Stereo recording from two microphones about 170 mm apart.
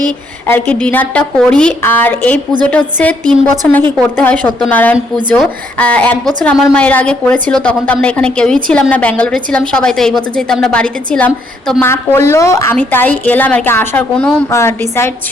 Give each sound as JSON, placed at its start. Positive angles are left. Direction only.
{"t": 0.4, "sound": "a woman's voice", "side_deg": 10}